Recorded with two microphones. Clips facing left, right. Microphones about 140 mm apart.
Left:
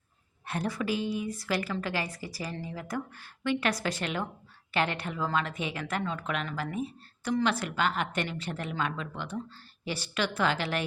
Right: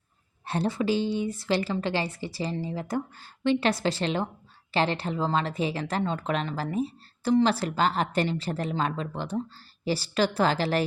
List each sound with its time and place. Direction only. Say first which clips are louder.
0.4 s a woman's voice: right 5 dB; 30° right (ahead or behind)